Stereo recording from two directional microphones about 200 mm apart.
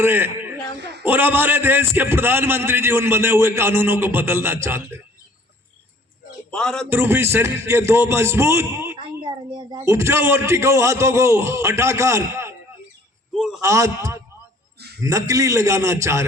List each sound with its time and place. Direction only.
0.0 s a man's voice: 10° right (ahead or behind)
6.5 s speech: 5° left (ahead or behind)
6.9 s a man's voice: 10° right (ahead or behind)
13.3 s a man's voice: centre (ahead or behind)
13.6 s a man's voice: 15° right (ahead or behind)